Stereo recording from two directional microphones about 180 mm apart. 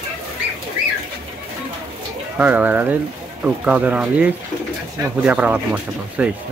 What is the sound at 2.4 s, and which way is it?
Speech, 10° right (ahead or behind).